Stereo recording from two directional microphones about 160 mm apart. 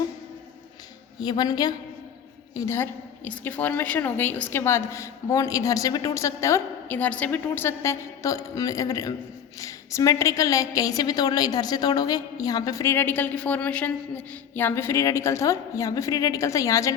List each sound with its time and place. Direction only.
1.2 s a woman's voice: 25° left (ahead or behind)